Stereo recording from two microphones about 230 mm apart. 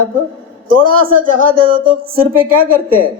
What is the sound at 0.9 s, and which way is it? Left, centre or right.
Speech, right.